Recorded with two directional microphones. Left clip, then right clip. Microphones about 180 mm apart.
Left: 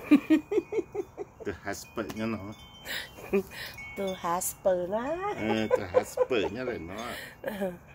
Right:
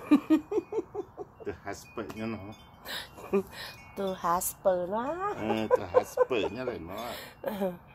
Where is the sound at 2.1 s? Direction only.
30° left (ahead or behind).